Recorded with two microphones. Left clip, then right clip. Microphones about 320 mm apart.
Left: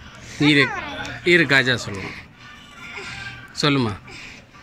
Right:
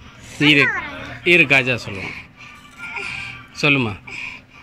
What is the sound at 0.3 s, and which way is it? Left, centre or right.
Speech, centre.